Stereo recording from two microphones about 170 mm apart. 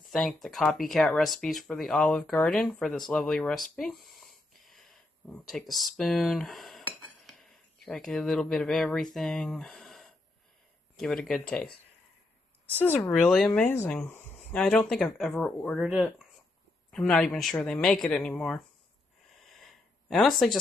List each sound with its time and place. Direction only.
0.1 s speech: centre (ahead or behind)
12.8 s speech: 10° left (ahead or behind)
13.1 s speech: centre (ahead or behind)
20.1 s speech: centre (ahead or behind)